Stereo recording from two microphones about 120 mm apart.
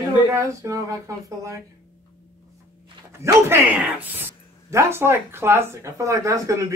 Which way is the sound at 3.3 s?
20° right (ahead or behind).